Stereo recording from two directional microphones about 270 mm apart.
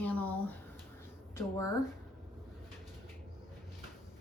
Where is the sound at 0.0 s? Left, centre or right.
Centre.